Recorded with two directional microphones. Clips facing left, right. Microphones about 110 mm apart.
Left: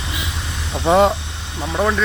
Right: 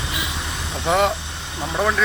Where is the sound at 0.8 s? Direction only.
25° left (ahead or behind).